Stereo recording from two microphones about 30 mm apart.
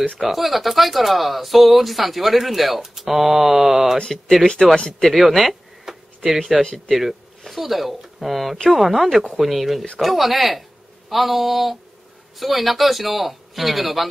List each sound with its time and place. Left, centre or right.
0.2 s speech: centre
3.0 s mantra: centre
4.6 s speech: centre
5.1 s a sound: centre
6.9 s mantra: centre
7.4 s speech: centre